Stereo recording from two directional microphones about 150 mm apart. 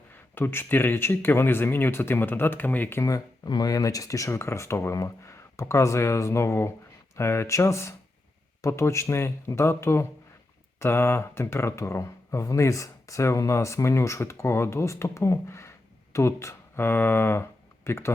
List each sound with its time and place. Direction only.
0.3 s speech: 15° left (ahead or behind)